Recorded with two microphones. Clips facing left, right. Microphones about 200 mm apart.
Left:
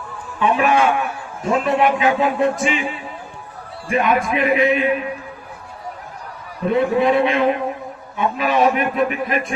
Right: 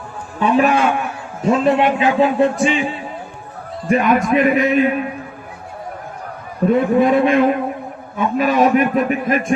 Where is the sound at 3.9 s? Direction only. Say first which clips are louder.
Right 4 dB; 40° right (ahead or behind).